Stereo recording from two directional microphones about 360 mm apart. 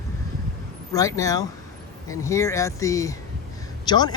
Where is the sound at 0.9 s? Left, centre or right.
Centre.